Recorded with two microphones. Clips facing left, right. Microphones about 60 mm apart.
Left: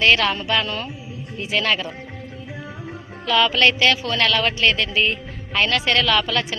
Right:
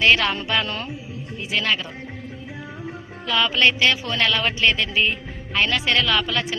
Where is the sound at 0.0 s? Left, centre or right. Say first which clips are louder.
Left 1 dB; centre.